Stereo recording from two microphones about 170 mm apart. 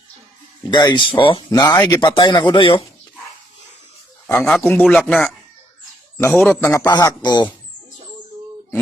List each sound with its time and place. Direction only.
0.7 s speech: 25° left (ahead or behind)
4.4 s speech: 5° left (ahead or behind)
6.1 s a man's voice: 15° left (ahead or behind)
6.8 s speech: 25° left (ahead or behind)